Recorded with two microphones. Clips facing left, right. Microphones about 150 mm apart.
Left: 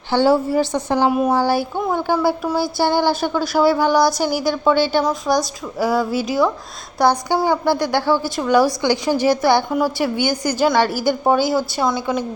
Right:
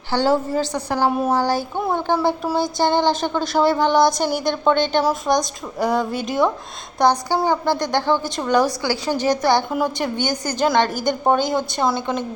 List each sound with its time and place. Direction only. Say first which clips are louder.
0.1 s a woman's voice: left 3 dB; 10° left (ahead or behind)